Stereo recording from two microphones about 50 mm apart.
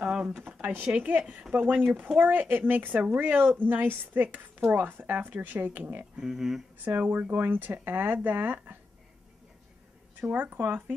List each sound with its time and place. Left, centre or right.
0.0 s a sound: right
0.4 s a sound: right
0.9 s a woman's voice: right
6.1 s speech: centre
6.8 s speech: right
10.2 s speech: right